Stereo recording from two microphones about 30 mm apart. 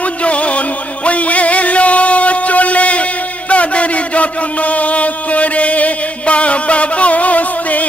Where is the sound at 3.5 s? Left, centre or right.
Left.